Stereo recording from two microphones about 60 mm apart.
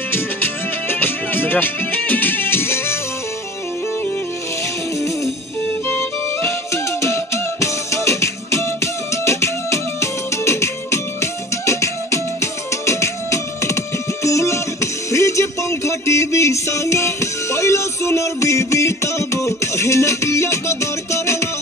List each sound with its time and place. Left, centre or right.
0.8 s music: left
6.7 s music: left